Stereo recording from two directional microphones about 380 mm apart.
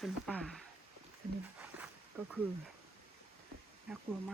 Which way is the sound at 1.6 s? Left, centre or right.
Centre.